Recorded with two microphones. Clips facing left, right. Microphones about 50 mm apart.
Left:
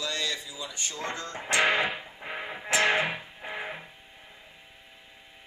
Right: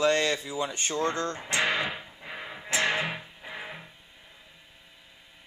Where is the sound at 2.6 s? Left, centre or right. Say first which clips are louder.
Left 3 dB; left.